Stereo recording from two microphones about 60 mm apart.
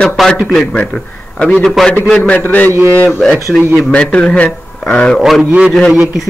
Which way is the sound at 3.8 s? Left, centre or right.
Centre.